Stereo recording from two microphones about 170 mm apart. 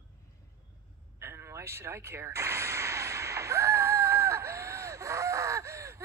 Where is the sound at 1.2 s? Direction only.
15° right (ahead or behind).